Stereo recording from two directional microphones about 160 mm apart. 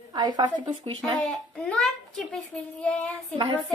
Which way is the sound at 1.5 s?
5° left (ahead or behind).